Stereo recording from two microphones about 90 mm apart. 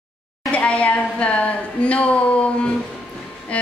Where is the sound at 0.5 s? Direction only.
15° left (ahead or behind).